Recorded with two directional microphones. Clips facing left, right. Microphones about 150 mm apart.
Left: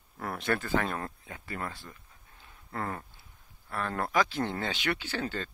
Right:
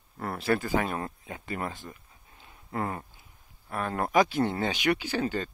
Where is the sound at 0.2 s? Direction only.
5° right (ahead or behind).